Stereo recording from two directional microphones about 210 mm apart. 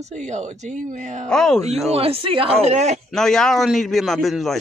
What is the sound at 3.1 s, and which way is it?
A man's voice, centre (ahead or behind).